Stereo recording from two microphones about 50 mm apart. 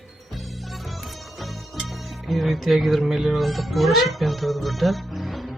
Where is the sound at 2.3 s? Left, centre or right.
Centre.